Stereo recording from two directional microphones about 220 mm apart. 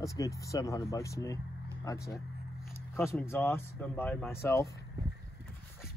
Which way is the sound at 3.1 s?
10° left (ahead or behind).